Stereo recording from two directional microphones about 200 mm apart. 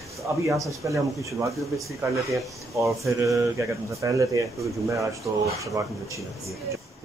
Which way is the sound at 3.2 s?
15° right (ahead or behind).